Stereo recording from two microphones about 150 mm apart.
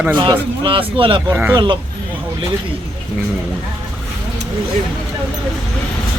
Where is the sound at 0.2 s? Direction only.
30° right (ahead or behind).